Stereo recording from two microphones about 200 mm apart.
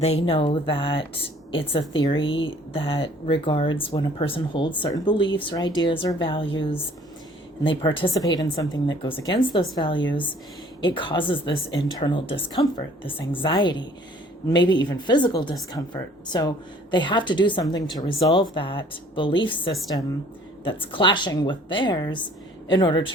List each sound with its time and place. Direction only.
0.0 s a woman's voice: 30° left (ahead or behind)
2.0 s a woman's voice: 25° left (ahead or behind)